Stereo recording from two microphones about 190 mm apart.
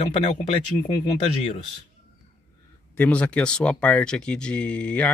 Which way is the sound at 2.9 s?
5° left (ahead or behind).